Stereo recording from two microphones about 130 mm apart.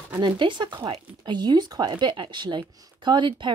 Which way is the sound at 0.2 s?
35° right (ahead or behind).